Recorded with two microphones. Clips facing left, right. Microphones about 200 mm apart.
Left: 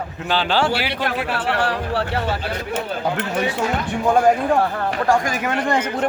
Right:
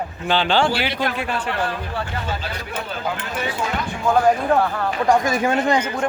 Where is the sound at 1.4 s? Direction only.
75° left (ahead or behind).